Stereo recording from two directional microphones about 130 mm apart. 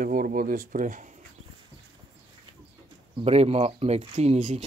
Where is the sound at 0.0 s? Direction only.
90° right.